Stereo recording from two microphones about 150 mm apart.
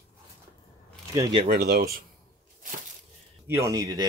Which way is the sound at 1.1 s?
20° right (ahead or behind).